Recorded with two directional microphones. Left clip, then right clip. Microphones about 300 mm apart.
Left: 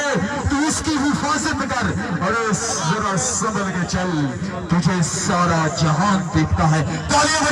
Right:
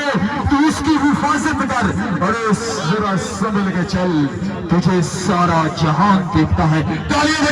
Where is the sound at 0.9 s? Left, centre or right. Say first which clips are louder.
Right 5 dB; right.